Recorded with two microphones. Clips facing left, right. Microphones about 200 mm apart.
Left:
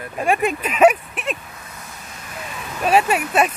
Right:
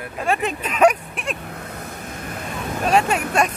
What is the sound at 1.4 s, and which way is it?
Vehicle, 60° right (ahead or behind).